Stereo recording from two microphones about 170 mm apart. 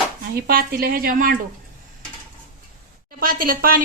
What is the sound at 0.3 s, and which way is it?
Speech, 60° right (ahead or behind).